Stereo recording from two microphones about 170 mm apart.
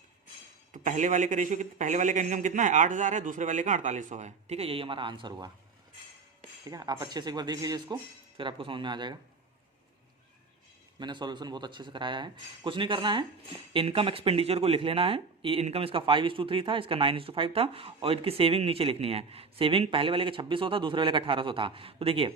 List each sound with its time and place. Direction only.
0.7 s speech: 45° right (ahead or behind); by 5.5 s 25° right (ahead or behind)
6.7 s speech: 20° right (ahead or behind)
11.0 s a man's voice: 25° right (ahead or behind)